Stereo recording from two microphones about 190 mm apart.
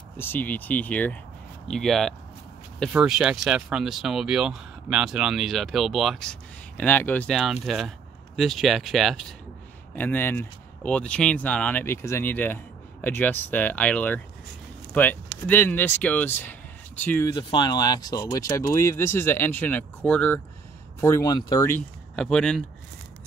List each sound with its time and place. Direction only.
0.2 s speech: 10° left (ahead or behind)
17.3 s speech: 25° left (ahead or behind)
22.1 s speech: 5° left (ahead or behind)